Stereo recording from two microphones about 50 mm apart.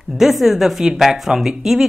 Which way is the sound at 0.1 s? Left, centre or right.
Centre.